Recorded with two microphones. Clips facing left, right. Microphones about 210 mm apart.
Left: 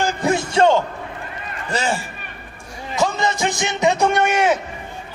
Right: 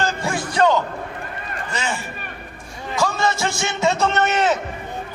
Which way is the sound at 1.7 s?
35° left (ahead or behind).